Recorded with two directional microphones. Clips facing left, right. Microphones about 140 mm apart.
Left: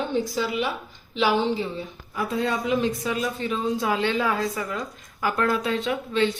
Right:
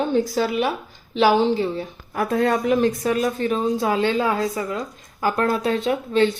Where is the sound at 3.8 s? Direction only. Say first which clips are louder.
Right 3 dB; 30° right (ahead or behind).